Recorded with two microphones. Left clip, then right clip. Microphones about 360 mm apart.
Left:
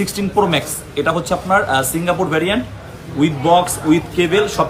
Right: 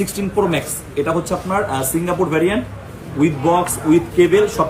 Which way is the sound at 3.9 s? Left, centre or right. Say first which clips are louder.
Right 2 dB; centre.